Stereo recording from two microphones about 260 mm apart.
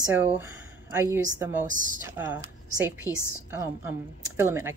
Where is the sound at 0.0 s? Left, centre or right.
Centre.